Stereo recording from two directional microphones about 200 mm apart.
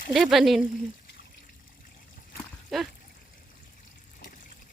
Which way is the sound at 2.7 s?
Centre (ahead or behind).